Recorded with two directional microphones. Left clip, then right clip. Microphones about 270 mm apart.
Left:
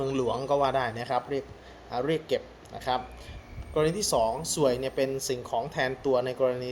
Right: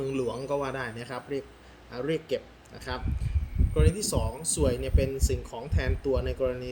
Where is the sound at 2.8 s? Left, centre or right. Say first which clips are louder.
Left 7 dB; centre.